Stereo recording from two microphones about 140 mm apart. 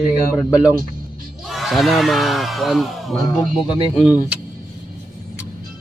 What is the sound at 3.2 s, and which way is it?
Speech, 30° left (ahead or behind).